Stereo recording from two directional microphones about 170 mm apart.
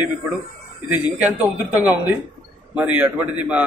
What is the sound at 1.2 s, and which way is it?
A man's voice, 10° right (ahead or behind).